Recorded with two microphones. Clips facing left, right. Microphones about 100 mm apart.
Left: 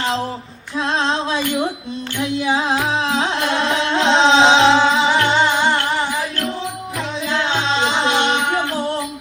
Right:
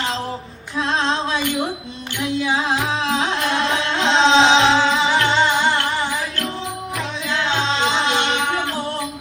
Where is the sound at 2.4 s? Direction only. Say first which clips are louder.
Left 2 dB; 30° left (ahead or behind).